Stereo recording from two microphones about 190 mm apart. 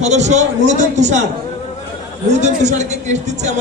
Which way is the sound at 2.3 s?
40° right (ahead or behind).